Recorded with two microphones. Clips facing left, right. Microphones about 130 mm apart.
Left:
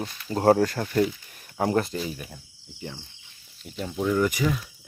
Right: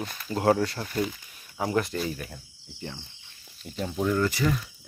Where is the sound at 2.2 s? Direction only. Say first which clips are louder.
Right 1 dB; 5° left (ahead or behind).